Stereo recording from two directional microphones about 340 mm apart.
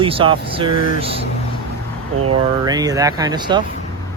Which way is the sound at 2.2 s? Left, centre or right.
Centre.